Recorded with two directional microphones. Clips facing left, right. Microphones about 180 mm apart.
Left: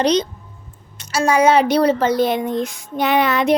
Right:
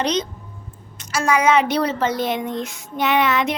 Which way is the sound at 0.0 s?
35° left (ahead or behind).